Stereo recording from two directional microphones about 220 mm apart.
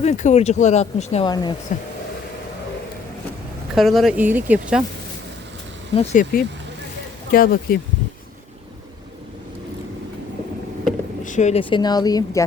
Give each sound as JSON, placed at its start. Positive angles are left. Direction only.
{"t": 0.0, "sound": "speech", "side_deg": 30}
{"t": 1.3, "sound": "speech", "side_deg": 20}
{"t": 3.8, "sound": "speech", "side_deg": 0}
{"t": 6.0, "sound": "speech", "side_deg": 35}
{"t": 11.2, "sound": "speech", "side_deg": 35}